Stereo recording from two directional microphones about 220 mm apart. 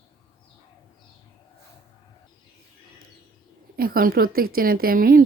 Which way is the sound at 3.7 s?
40° right (ahead or behind).